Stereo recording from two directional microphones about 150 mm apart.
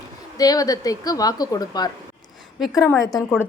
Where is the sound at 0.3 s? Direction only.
25° left (ahead or behind).